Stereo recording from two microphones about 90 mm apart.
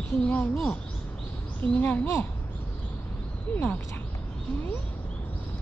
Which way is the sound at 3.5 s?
20° left (ahead or behind).